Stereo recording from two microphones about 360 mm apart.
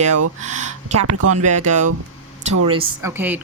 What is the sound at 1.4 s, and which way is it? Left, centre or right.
A woman's voice, centre.